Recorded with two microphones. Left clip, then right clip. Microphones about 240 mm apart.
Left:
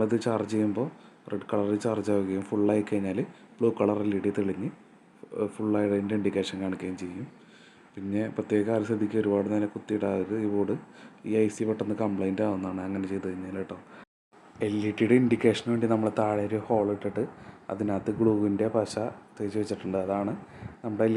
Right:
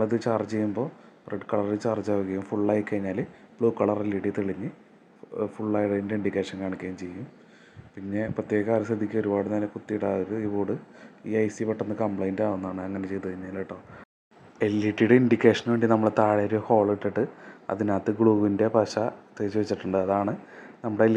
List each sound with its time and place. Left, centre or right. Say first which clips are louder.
0.0 s speech: right 2 dB; centre
8.1 s speech: right 1 dB; centre